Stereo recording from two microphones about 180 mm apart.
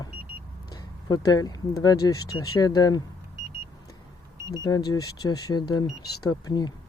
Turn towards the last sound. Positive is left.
turn(degrees=20)  # may be behind; listen again after turning